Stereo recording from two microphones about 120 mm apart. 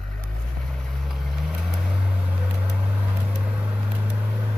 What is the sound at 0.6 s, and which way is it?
Vehicle, 5° left (ahead or behind).